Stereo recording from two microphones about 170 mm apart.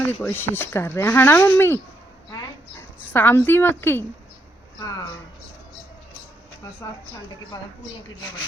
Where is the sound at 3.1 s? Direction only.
15° left (ahead or behind).